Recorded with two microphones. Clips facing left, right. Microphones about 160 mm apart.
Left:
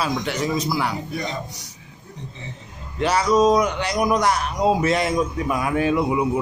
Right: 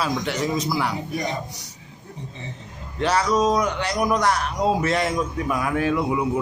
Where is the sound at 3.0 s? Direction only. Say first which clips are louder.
Left 3 dB; 10° left (ahead or behind).